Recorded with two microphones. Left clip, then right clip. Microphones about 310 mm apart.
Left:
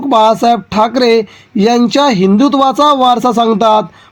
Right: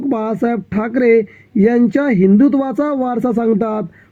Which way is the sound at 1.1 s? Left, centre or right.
Centre.